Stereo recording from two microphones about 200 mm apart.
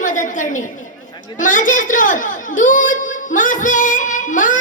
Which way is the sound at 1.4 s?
40° left (ahead or behind).